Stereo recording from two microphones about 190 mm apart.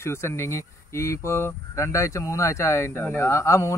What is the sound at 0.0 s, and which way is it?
Speech, 15° left (ahead or behind).